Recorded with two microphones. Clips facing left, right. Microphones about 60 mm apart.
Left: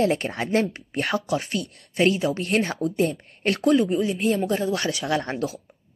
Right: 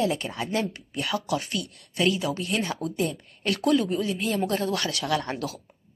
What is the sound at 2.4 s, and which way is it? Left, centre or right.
Speech, left.